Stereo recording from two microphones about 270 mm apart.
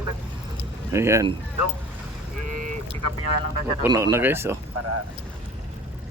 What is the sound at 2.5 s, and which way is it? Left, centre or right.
Duck, right.